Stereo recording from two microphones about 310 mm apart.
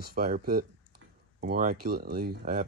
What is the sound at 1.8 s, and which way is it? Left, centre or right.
Speech, right.